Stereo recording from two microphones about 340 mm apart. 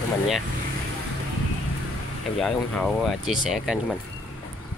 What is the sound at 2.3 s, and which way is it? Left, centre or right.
Speech, centre.